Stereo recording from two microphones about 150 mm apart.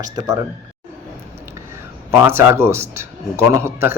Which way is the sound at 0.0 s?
25° right (ahead or behind).